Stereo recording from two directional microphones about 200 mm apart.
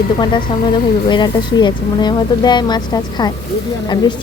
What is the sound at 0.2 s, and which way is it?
Speech, 25° left (ahead or behind).